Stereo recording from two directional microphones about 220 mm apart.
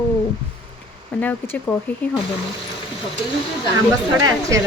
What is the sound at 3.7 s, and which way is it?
Speech, 15° right (ahead or behind).